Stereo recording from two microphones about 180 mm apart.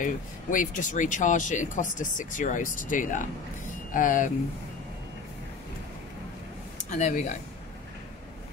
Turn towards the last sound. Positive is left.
turn(degrees=40)  # may be behind; listen again after turning